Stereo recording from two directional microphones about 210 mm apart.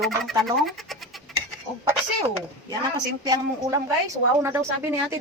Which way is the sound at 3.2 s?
20° right (ahead or behind).